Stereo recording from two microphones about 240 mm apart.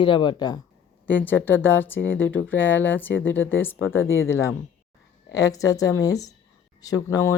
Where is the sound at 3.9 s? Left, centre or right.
Left.